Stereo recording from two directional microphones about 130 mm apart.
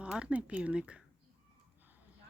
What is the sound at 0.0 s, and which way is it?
Speech, 10° right (ahead or behind).